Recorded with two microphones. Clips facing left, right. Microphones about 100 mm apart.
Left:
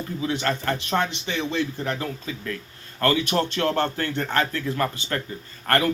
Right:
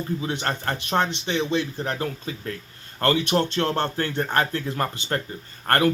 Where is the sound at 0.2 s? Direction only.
30° right (ahead or behind).